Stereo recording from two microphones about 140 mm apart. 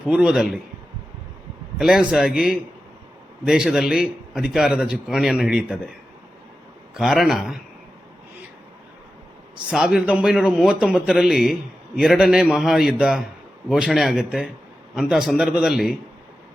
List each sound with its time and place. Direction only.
0.0 s a man's voice: 5° right (ahead or behind)
1.8 s a man's voice: 5° right (ahead or behind)
6.9 s a man's voice: 5° right (ahead or behind)
9.6 s a man's voice: 5° right (ahead or behind)